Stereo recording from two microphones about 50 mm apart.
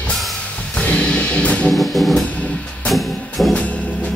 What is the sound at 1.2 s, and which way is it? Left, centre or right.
Music, left.